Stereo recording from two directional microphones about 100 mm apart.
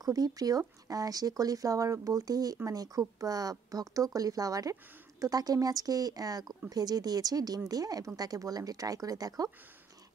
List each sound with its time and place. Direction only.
0.0 s speech: 40° right (ahead or behind)